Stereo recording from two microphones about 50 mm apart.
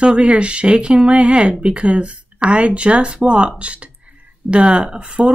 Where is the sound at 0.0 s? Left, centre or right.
Right.